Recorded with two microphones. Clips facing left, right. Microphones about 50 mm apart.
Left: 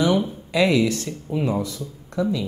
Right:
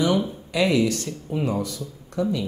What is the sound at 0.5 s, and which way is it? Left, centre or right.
Speech, left.